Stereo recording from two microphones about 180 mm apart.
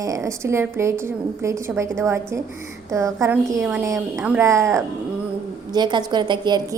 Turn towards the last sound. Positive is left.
turn(degrees=-25)  # may be behind; listen again after turning